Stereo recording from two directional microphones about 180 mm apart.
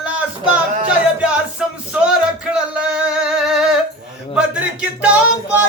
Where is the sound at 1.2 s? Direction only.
5° right (ahead or behind).